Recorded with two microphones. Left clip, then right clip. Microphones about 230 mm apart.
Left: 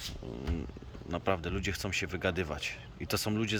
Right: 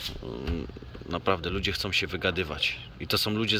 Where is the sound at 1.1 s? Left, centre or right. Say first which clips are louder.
Right 5 dB; centre.